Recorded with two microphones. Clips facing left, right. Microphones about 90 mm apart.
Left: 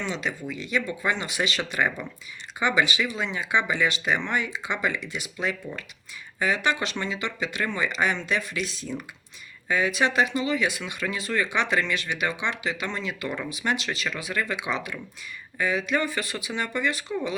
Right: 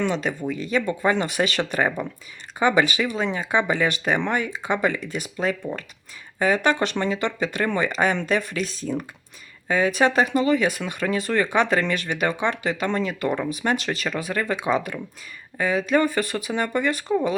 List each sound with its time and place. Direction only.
0.0 s speech: 50° right (ahead or behind)
2.0 s speech: 60° right (ahead or behind)
2.6 s speech: 45° right (ahead or behind)